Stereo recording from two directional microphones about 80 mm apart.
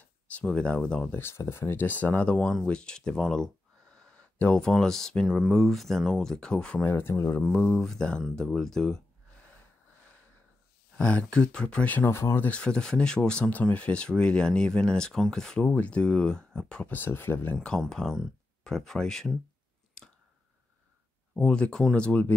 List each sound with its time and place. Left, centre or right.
0.3 s speech: centre
1.1 s speech: left; by 6.8 s centre
6.8 s speech: left
7.4 s speech: centre
11.0 s speech: centre
12.1 s speech: left
12.4 s speech: centre
15.6 s speech: centre
16.8 s speech: left
17.6 s speech: centre
20.0 s a sound: centre
21.4 s speech: centre